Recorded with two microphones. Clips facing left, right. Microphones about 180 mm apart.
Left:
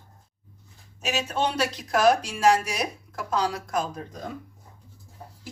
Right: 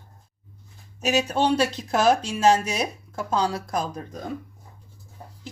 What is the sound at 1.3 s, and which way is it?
Speech, 30° right (ahead or behind).